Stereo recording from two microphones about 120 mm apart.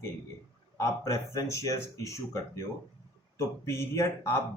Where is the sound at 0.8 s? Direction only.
25° left (ahead or behind).